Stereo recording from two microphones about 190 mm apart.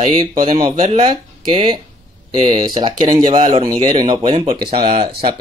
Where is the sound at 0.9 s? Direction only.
25° right (ahead or behind).